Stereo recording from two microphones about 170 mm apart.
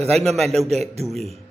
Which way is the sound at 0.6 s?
40° right (ahead or behind).